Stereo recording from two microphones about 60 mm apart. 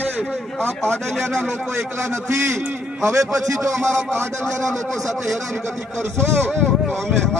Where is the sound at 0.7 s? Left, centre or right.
Right.